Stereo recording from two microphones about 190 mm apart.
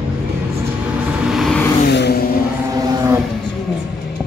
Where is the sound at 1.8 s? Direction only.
60° left (ahead or behind).